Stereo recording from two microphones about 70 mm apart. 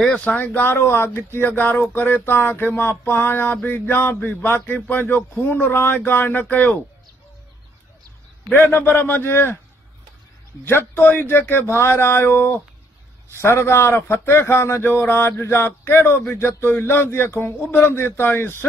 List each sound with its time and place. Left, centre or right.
0.0 s a man's voice: centre
8.5 s speech: left
10.6 s a man's voice: left